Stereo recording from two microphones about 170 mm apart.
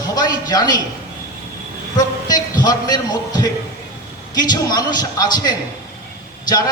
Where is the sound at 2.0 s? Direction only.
25° left (ahead or behind).